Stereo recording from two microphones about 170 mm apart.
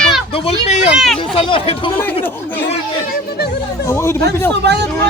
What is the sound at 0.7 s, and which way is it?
Speech, 40° left (ahead or behind).